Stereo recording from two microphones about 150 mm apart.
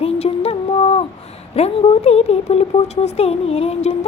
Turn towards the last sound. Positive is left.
turn(degrees=45)  # may be behind; listen again after turning